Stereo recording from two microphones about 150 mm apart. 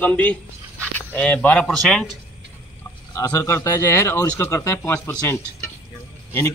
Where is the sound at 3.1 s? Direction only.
20° left (ahead or behind).